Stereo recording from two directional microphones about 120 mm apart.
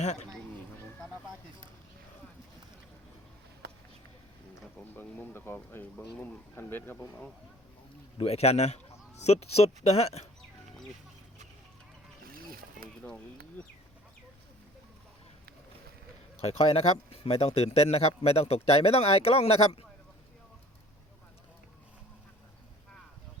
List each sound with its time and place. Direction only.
0.0 s speech: 70° left (ahead or behind)
4.9 s speech: 15° left (ahead or behind)
8.2 s speech: 60° left (ahead or behind)
13.1 s speech: 10° left (ahead or behind)
16.4 s speech: 55° left (ahead or behind)